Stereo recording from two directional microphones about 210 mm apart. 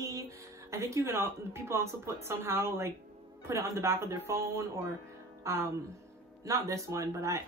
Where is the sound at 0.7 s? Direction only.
15° right (ahead or behind).